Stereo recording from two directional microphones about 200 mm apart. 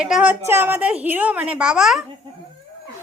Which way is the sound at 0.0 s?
5° right (ahead or behind).